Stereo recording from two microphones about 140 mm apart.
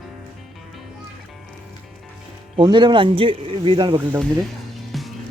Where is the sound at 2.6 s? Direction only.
35° right (ahead or behind).